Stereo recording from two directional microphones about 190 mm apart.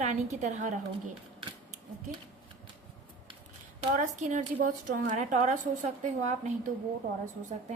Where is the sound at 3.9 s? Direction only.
40° right (ahead or behind).